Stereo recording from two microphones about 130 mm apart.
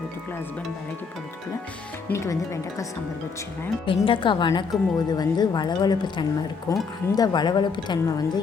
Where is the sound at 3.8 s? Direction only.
40° left (ahead or behind).